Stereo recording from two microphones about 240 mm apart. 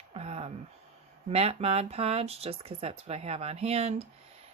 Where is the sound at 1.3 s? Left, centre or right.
Right.